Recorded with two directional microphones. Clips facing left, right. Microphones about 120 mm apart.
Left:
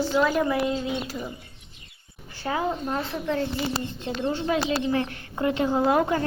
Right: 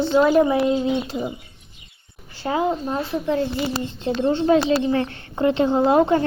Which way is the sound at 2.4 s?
25° right (ahead or behind).